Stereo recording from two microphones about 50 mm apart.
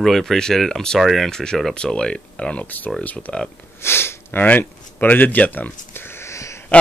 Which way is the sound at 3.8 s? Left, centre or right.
Left.